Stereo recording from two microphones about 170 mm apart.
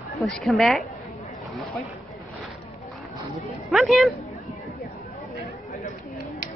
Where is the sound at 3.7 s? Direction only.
Centre (ahead or behind).